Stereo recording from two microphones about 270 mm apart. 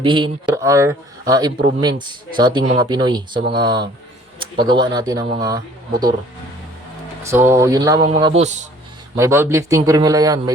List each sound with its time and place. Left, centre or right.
0.0 s speech: centre
7.2 s speech: centre; by 8.6 s right
9.1 s speech: centre